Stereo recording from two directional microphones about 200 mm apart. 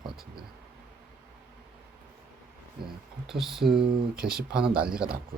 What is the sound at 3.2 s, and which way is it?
Speech, centre (ahead or behind).